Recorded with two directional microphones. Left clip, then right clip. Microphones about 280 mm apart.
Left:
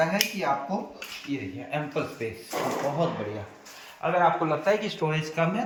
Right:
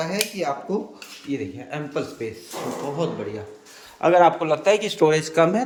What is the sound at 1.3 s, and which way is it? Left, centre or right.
Speech, centre.